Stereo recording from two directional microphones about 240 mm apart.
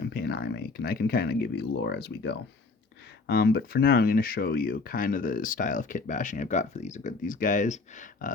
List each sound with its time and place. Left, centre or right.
0.0 s speech: left